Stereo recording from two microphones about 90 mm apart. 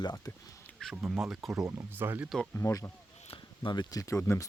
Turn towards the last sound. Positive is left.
turn(degrees=35)  # may be behind; listen again after turning